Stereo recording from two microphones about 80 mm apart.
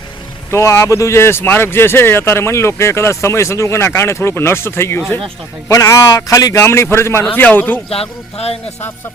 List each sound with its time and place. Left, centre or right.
0.5 s speech: left
6.6 s speech: left
7.3 s a man's voice: left